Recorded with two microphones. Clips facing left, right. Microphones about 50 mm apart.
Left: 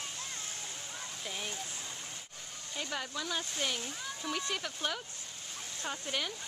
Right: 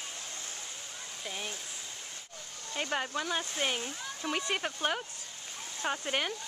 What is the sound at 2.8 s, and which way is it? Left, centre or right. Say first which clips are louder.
Speech: right 5 dB; right.